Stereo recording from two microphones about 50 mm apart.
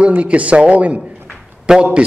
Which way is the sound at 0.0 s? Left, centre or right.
Right.